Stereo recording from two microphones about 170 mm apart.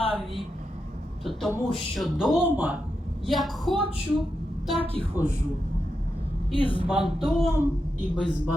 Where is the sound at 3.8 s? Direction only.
30° right (ahead or behind).